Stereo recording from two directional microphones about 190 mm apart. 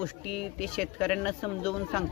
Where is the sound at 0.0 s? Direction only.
Centre (ahead or behind).